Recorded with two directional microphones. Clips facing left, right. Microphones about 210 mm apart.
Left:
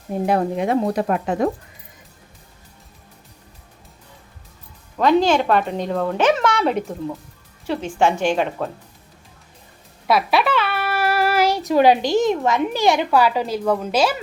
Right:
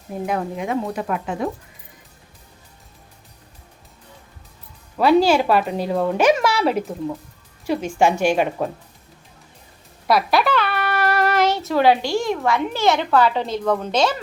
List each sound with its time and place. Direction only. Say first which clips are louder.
0.3 s speech: left 5 dB; 35° left (ahead or behind)
4.9 s a woman's voice: right 1 dB; 10° right (ahead or behind)
10.1 s a child's voice: even; centre (ahead or behind)